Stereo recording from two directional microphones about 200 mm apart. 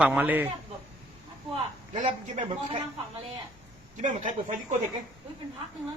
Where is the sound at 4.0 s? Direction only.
40° right (ahead or behind).